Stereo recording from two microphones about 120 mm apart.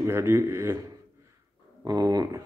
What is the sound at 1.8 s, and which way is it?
Speech, 30° right (ahead or behind).